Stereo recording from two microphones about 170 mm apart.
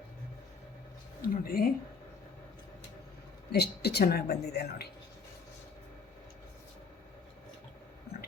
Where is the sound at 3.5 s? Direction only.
70° left (ahead or behind).